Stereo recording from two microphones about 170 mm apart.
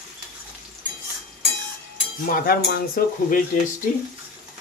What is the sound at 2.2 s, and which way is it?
Speech, 55° left (ahead or behind).